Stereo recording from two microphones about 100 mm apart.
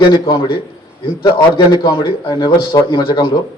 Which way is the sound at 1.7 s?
50° left (ahead or behind).